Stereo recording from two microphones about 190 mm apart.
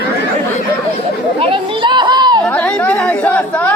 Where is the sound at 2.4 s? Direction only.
5° left (ahead or behind).